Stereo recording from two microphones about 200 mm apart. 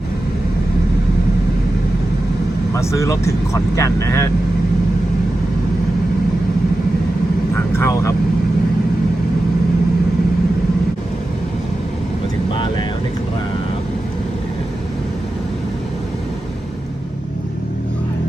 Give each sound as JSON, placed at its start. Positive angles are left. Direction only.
{"t": 2.7, "sound": "speech", "side_deg": 15}
{"t": 7.5, "sound": "vehicle", "side_deg": 15}